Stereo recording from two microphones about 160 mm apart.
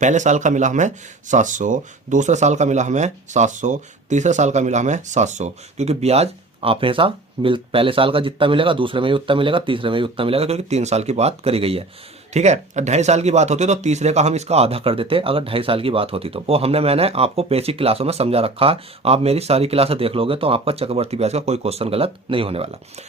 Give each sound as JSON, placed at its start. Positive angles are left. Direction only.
{"t": 0.0, "sound": "speech", "side_deg": -50}